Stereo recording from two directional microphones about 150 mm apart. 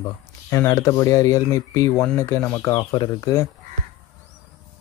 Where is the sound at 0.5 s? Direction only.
20° left (ahead or behind).